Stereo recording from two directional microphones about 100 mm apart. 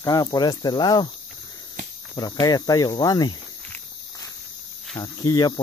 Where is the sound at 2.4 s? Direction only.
40° left (ahead or behind).